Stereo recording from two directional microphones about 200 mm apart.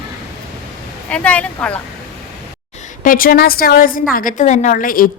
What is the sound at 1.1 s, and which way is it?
Speech, 5° left (ahead or behind).